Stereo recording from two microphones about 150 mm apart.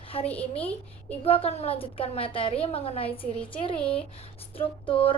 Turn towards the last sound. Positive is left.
turn(degrees=35)  # may be behind; listen again after turning